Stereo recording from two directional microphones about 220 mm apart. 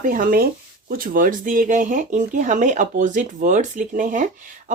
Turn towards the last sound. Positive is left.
turn(degrees=-35)  # may be behind; listen again after turning